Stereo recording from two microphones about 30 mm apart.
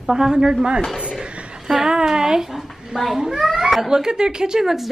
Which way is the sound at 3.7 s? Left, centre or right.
Centre.